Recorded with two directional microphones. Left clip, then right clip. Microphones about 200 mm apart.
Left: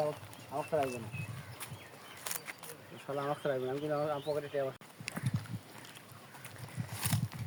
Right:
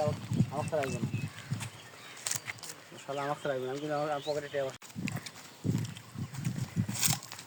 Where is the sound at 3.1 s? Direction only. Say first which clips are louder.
Right 1 dB; 50° right (ahead or behind).